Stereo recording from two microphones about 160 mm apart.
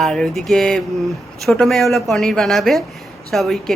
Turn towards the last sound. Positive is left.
turn(degrees=0)  # may be behind; listen again after turning